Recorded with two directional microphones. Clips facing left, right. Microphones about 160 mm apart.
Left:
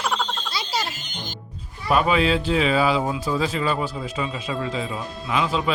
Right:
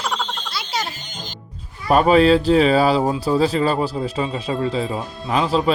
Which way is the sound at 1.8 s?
40° right (ahead or behind).